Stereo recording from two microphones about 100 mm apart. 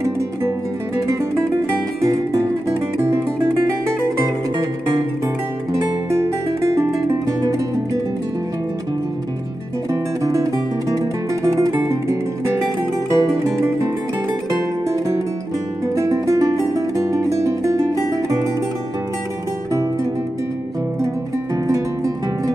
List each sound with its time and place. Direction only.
2.0 s music: 35° right (ahead or behind)
5.7 s music: 30° right (ahead or behind)
10.2 s music: 35° right (ahead or behind)
21.6 s music: 30° right (ahead or behind)